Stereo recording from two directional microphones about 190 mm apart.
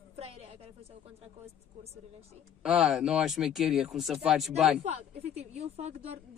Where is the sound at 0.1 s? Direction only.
30° right (ahead or behind).